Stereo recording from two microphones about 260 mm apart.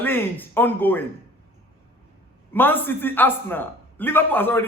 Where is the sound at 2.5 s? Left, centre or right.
Centre.